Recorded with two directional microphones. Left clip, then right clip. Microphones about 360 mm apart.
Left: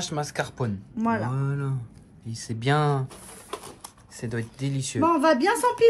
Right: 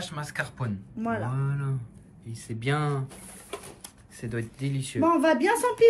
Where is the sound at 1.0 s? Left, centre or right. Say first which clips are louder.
Left 4 dB; left.